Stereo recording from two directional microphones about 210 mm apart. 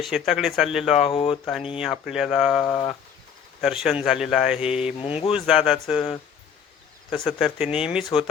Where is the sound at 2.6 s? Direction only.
20° left (ahead or behind).